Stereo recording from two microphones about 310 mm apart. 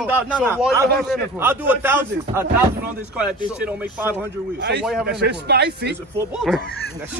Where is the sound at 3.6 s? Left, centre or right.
Centre.